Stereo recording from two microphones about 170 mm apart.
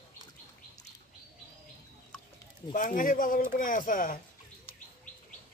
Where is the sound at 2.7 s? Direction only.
50° left (ahead or behind).